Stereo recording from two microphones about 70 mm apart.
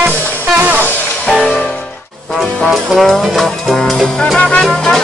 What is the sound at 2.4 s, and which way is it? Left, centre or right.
Music, centre.